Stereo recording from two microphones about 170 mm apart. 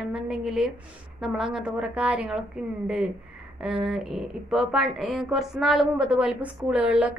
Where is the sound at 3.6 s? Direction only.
5° right (ahead or behind).